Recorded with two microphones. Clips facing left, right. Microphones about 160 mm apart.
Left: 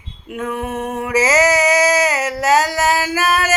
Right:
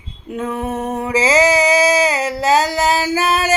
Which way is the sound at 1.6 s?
30° right (ahead or behind).